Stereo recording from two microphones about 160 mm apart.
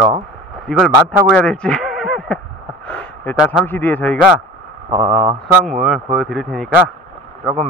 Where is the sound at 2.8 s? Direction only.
10° left (ahead or behind).